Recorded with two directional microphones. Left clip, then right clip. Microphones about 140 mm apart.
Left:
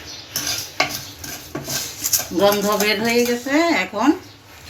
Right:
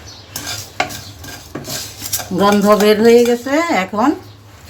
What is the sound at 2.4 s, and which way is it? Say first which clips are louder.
Speech: right 6 dB; 90° right.